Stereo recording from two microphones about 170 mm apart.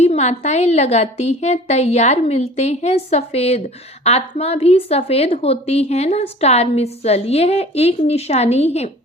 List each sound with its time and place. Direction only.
0.0 s a woman's voice: 40° left (ahead or behind)